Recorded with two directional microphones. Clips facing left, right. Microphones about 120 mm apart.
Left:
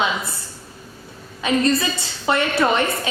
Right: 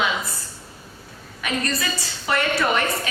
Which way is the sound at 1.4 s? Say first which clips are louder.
Left 7 dB; 25° left (ahead or behind).